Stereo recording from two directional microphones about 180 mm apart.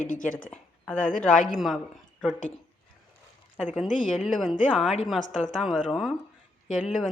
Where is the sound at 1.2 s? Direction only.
5° left (ahead or behind).